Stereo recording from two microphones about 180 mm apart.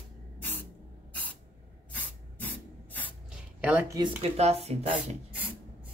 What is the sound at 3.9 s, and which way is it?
Speech, 25° right (ahead or behind).